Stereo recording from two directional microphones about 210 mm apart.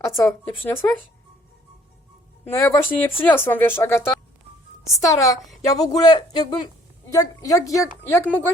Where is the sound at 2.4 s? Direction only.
10° left (ahead or behind).